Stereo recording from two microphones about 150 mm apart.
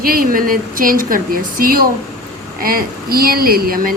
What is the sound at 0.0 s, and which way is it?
Speech, 75° right (ahead or behind).